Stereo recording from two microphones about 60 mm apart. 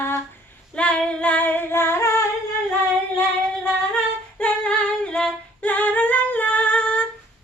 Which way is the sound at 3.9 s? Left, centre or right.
Centre.